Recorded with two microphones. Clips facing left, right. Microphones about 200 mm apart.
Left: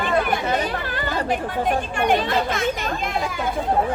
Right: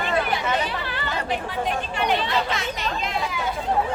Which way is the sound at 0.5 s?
45° left (ahead or behind).